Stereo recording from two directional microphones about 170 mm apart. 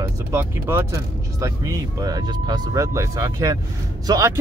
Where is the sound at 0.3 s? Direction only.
15° right (ahead or behind).